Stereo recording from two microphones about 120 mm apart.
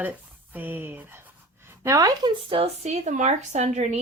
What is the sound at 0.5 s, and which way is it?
Speech, 15° right (ahead or behind).